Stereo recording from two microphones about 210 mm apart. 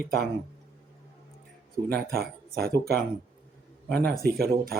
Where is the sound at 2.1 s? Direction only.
45° right (ahead or behind).